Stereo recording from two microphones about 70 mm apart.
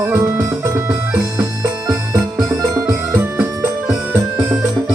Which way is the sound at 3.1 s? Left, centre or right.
Right.